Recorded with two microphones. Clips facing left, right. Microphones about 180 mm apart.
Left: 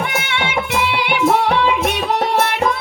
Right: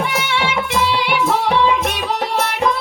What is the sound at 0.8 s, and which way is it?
Music, 60° left (ahead or behind).